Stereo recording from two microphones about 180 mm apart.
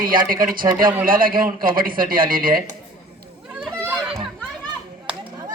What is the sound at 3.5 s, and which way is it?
Children playing, 10° right (ahead or behind).